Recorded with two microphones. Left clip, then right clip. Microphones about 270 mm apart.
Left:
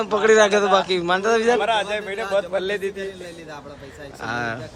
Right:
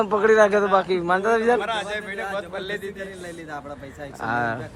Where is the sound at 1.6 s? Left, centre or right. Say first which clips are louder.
Left 5 dB; left.